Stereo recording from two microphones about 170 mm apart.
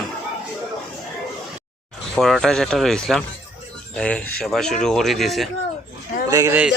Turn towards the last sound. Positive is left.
turn(degrees=-20)  # may be behind; listen again after turning